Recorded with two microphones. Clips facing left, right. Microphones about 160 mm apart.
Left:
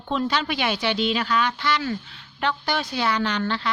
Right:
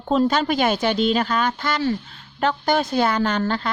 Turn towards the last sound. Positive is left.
turn(degrees=-45)  # may be behind; listen again after turning